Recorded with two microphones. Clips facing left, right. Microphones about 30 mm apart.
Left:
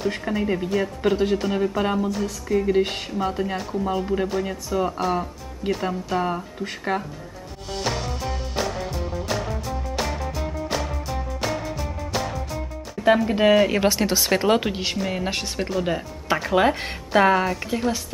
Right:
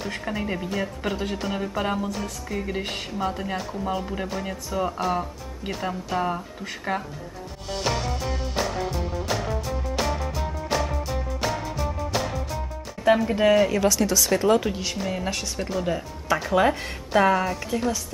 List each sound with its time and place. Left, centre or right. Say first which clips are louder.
0.2 s speech: left 4 dB; centre
2.7 s speech: left 8 dB; centre
7.7 s music: even; centre
13.3 s speech: left 2 dB; centre
13.7 s speech: left 1 dB; left
15.0 s speech: left 2 dB; centre
15.2 s speech: left 2 dB; left; by 17.8 s centre